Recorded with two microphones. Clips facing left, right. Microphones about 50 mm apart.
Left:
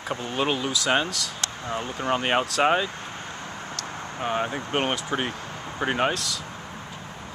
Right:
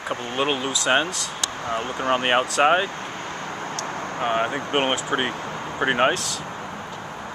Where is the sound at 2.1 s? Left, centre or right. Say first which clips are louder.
Right 3 dB; right.